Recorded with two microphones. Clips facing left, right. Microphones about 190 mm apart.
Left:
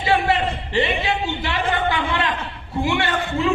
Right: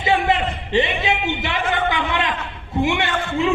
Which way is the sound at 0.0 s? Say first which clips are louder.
Even; 20° right (ahead or behind).